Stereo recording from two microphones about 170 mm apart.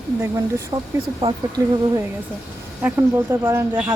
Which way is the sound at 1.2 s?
35° right (ahead or behind).